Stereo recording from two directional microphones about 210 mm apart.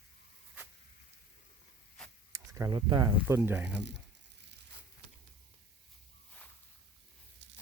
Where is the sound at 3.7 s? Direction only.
55° right (ahead or behind).